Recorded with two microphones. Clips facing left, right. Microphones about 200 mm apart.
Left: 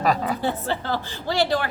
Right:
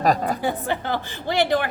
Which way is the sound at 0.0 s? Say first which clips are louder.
Right 2 dB; 45° right (ahead or behind).